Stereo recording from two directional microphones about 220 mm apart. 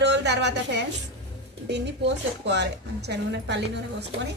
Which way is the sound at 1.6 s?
50° right (ahead or behind).